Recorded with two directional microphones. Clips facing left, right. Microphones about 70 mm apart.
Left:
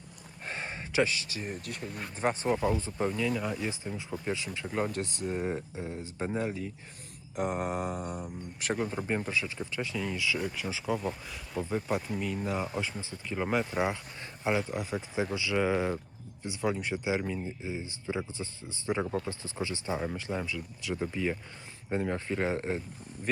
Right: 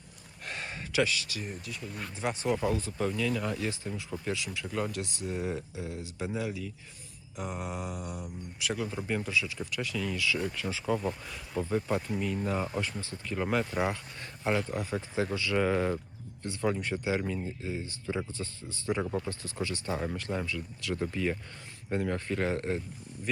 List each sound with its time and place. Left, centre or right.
0.4 s a sound: left
1.6 s speech: left
1.9 s speech: centre
2.1 s speech: left
3.1 s speech: centre; by 6.7 s left
7.3 s speech: left; by 12.8 s centre
12.8 s speech: centre
14.7 s speech: centre
19.0 s speech: centre
19.3 s speech: left